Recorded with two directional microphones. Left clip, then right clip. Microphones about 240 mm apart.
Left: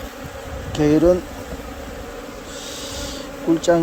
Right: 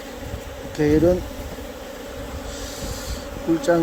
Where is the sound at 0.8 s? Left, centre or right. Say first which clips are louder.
Left 2 dB; centre.